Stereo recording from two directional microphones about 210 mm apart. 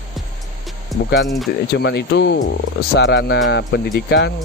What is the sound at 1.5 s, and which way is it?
Speech, 50° left (ahead or behind).